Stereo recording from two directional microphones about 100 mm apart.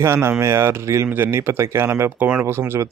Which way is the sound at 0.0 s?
25° right (ahead or behind).